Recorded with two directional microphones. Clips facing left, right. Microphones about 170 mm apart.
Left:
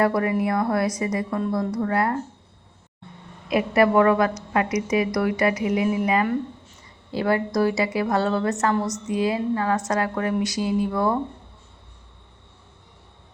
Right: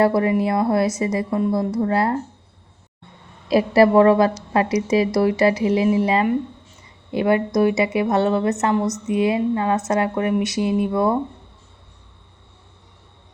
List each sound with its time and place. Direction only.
0.0 s a woman's voice: 25° right (ahead or behind)
3.5 s a woman's voice: 35° right (ahead or behind)